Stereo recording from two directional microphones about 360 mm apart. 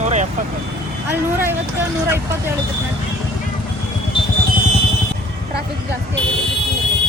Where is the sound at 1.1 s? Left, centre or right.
Centre.